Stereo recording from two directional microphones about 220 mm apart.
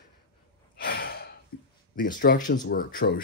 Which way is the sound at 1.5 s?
45° left (ahead or behind).